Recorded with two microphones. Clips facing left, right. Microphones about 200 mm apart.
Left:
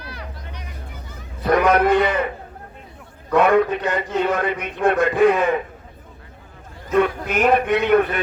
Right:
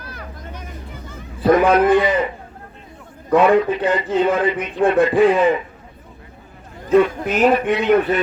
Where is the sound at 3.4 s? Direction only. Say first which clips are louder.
Right 1 dB; 55° left (ahead or behind).